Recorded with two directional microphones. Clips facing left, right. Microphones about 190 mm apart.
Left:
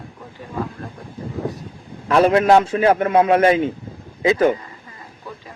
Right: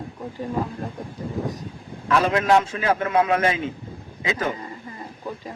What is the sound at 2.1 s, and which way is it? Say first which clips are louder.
Speech: left 6 dB; 30° left (ahead or behind).